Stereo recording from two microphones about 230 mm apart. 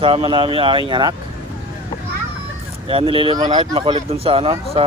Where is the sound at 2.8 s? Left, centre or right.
Right.